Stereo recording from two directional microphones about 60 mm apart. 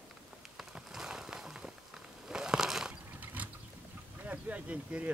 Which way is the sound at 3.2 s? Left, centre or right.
Right.